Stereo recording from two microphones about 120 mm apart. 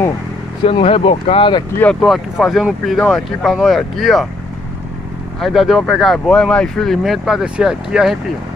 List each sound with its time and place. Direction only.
0.7 s speech: 50° left (ahead or behind)
2.0 s speech: centre (ahead or behind)
5.4 s speech: centre (ahead or behind)